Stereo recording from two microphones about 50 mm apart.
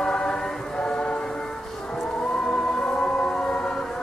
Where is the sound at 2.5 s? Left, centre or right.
Centre.